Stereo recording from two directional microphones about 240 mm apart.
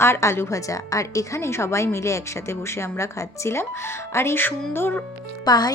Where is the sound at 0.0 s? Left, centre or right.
Centre.